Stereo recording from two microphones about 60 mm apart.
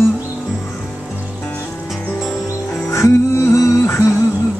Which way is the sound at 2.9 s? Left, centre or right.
Left.